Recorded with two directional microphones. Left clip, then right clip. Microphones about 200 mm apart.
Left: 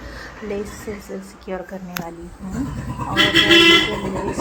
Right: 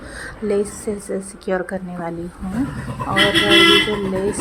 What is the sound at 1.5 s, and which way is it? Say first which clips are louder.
Speech: right 7 dB; 15° right (ahead or behind).